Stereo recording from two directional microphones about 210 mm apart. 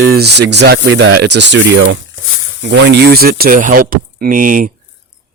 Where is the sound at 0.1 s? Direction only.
50° right (ahead or behind).